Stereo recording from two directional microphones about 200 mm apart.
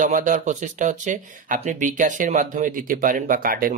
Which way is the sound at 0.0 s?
40° right (ahead or behind).